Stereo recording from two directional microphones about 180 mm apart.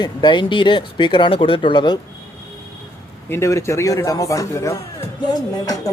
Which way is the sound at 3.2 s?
15° left (ahead or behind).